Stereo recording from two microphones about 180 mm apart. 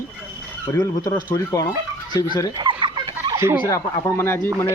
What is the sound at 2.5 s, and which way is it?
Turkey, 25° right (ahead or behind).